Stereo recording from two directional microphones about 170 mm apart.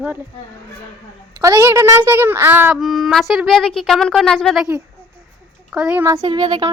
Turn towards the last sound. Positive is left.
turn(degrees=-25)  # may be behind; listen again after turning